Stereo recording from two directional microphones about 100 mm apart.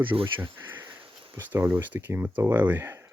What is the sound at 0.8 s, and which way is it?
Sniff, 55° right (ahead or behind).